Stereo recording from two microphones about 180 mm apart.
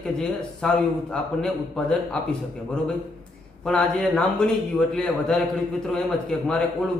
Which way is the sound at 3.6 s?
5° left (ahead or behind).